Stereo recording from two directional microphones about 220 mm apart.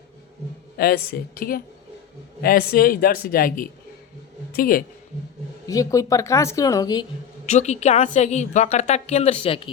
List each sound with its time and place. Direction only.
0.8 s a woman's voice: 45° left (ahead or behind)
5.6 s speech: 15° left (ahead or behind)
7.4 s a woman's voice: 30° left (ahead or behind)